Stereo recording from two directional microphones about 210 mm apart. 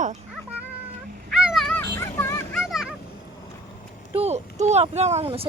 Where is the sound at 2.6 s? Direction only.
Centre (ahead or behind).